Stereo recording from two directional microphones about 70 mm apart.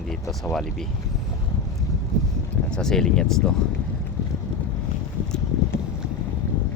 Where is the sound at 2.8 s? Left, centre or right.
Centre.